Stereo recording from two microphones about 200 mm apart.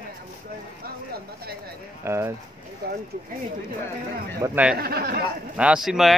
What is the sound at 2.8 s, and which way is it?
Speech, 50° right (ahead or behind).